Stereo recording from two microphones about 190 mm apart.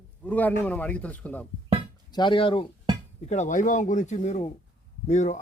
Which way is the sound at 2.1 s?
25° left (ahead or behind).